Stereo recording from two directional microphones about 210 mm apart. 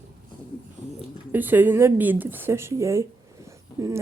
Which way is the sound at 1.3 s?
10° right (ahead or behind).